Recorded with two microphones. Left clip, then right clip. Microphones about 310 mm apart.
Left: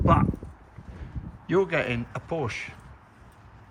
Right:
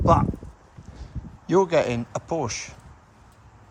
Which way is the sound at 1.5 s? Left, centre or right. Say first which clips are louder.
Right 4 dB; centre.